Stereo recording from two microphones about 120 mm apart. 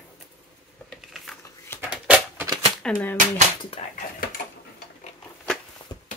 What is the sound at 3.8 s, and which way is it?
Speech, 65° left (ahead or behind).